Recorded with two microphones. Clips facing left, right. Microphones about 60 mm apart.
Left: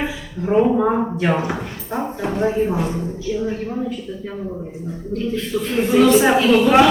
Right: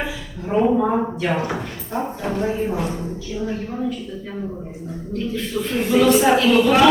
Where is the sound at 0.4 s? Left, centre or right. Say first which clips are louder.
Left 2 dB; centre.